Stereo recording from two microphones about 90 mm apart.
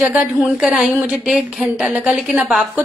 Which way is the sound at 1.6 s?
15° right (ahead or behind).